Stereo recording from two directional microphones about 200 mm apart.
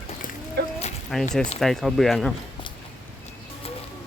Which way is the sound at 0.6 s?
55° right (ahead or behind).